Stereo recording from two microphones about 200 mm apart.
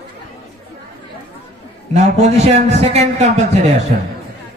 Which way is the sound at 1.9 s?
35° right (ahead or behind).